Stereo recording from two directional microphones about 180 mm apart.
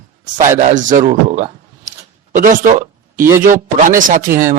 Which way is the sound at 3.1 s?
15° right (ahead or behind).